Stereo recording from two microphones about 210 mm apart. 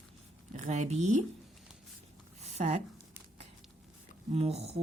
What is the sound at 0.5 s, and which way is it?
Speech, 35° right (ahead or behind).